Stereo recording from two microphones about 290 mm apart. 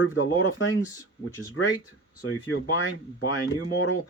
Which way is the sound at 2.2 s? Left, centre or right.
Left.